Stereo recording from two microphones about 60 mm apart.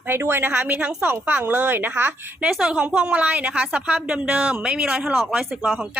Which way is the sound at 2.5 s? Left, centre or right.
Centre.